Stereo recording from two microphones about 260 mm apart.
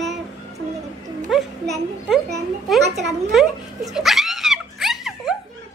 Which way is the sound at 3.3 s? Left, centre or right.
Centre.